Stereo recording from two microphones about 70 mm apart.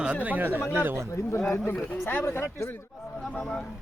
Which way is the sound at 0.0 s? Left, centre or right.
Centre.